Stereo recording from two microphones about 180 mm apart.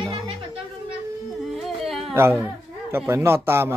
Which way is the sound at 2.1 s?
15° right (ahead or behind).